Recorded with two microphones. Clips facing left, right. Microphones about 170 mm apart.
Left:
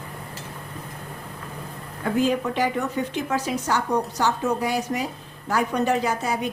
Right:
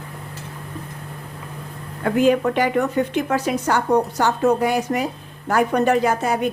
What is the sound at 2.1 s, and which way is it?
A woman's voice, 65° right (ahead or behind).